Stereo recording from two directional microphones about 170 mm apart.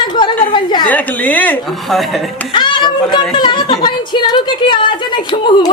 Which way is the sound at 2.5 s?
25° left (ahead or behind).